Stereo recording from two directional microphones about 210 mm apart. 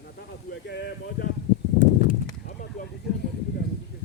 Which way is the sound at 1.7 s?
45° left (ahead or behind).